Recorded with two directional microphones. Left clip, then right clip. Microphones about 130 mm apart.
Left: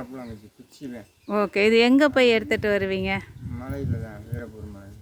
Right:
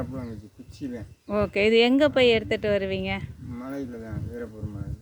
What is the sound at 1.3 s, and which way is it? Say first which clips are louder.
Speech: left 2 dB; 35° left (ahead or behind).